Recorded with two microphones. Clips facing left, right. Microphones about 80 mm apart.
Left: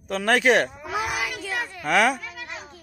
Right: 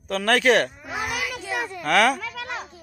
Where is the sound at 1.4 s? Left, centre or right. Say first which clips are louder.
Right 1 dB; centre.